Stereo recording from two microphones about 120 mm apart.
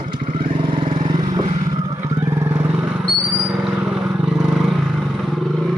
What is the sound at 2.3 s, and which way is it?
Vehicle, 25° right (ahead or behind).